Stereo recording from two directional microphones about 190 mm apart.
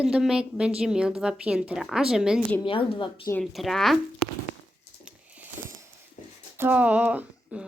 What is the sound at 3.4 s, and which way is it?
Speech, centre (ahead or behind).